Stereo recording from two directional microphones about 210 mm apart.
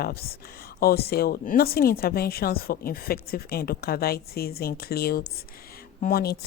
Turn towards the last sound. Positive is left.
turn(degrees=45)  # may be behind; listen again after turning